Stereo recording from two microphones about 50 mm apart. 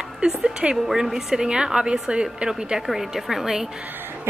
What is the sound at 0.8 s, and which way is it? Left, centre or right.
A woman's voice, centre.